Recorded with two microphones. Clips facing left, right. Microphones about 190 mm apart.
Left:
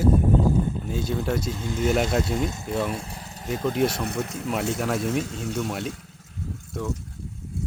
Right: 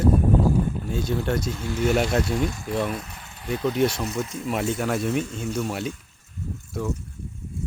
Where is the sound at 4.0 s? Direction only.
60° left (ahead or behind).